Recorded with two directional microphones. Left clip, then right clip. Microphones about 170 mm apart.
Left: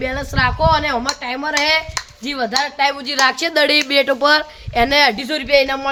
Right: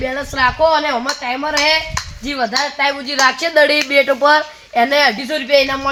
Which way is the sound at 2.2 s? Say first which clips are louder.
Right 1 dB; 30° left (ahead or behind).